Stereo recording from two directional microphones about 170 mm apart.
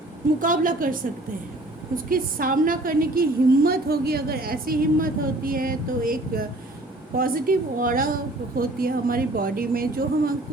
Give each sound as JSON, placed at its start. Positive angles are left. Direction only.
{"t": 0.3, "sound": "a woman's voice", "side_deg": -55}
{"t": 2.0, "sound": "a woman's voice", "side_deg": -55}